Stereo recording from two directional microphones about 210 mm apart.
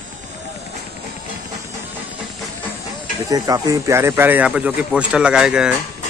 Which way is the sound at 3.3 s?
15° right (ahead or behind).